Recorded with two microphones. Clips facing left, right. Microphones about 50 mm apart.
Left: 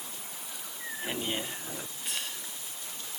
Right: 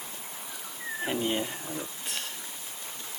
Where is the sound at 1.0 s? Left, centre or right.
Centre.